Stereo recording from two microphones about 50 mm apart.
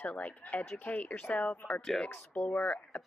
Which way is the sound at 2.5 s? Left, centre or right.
Centre.